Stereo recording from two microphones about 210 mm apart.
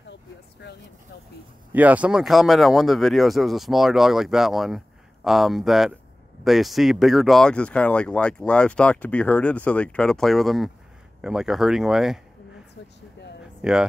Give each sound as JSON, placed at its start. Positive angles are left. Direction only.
{"t": 0.1, "sound": "a sound", "side_deg": 55}
{"t": 1.7, "sound": "speech", "side_deg": -5}
{"t": 13.6, "sound": "speech", "side_deg": -5}